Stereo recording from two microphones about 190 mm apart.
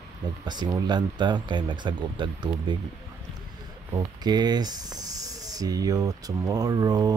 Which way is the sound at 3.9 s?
20° right (ahead or behind).